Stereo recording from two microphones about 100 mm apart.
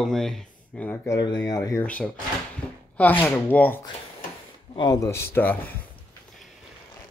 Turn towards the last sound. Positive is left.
turn(degrees=20)  # may be behind; listen again after turning